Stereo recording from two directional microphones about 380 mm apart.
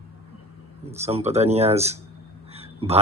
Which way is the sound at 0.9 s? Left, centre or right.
Centre.